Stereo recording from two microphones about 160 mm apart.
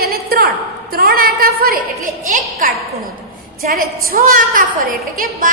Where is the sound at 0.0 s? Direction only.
70° right (ahead or behind).